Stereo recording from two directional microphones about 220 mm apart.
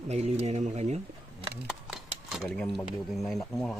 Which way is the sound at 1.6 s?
5° right (ahead or behind).